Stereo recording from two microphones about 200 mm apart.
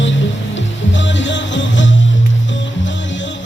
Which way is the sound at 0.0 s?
65° left (ahead or behind).